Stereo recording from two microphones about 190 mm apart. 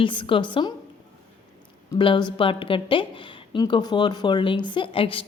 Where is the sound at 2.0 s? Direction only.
25° left (ahead or behind).